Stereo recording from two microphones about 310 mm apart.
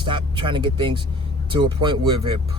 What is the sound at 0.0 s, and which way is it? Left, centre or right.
Speech, centre.